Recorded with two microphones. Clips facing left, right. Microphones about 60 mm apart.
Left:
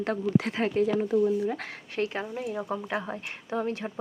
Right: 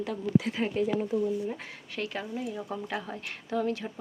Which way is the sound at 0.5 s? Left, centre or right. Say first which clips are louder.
Left 3 dB; left.